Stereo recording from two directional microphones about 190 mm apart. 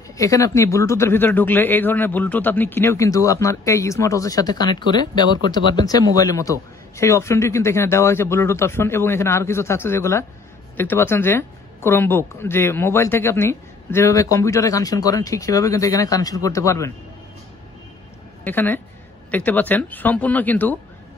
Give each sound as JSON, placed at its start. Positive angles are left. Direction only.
{"t": 0.2, "sound": "speech", "side_deg": 15}
{"t": 18.4, "sound": "a woman's voice", "side_deg": 10}